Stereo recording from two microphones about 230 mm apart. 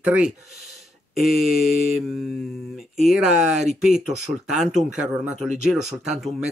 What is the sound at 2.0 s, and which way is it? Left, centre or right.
Speech, centre.